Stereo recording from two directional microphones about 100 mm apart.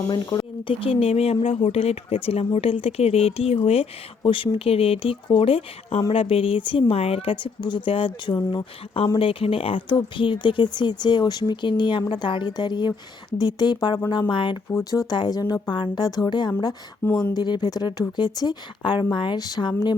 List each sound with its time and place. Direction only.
0.1 s speech: 40° left (ahead or behind)
0.7 s speech: 65° left (ahead or behind)
4.2 s a woman's voice: 60° left (ahead or behind)
14.7 s speech: 30° left (ahead or behind)
15.1 s speech: 45° left (ahead or behind)
17.0 s speech: 15° left (ahead or behind)
17.3 s speech: 45° left (ahead or behind)